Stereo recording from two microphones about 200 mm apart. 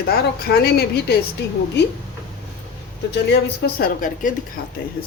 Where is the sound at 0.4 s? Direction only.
50° left (ahead or behind).